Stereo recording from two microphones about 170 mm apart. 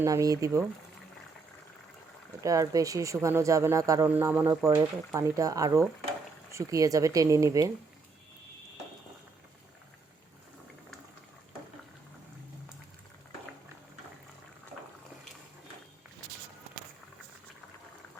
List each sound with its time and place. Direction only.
0.0 s speech: 20° right (ahead or behind)
2.4 s speech: 20° right (ahead or behind)